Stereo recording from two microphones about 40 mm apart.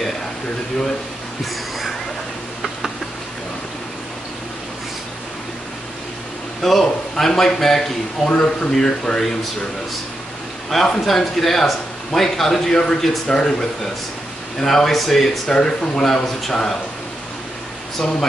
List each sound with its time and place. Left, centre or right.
1.4 s a sound: centre
6.6 s a man's voice: centre
10.7 s a man's voice: centre
15.5 s speech: left
16.1 s a man's voice: centre